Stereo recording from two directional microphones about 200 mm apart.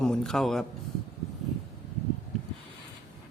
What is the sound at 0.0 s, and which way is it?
Speech, 5° left (ahead or behind).